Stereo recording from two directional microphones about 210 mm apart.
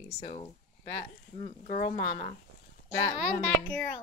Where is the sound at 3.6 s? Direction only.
10° left (ahead or behind).